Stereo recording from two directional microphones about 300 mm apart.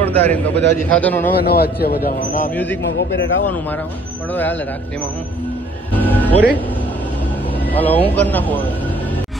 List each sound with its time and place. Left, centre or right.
0.0 s a man's voice: centre
1.4 s a man's voice: left
2.5 s a man's voice: centre
3.0 s a man's voice: left
4.3 s a man's voice: centre
5.9 s music: centre
7.6 s a man's voice: centre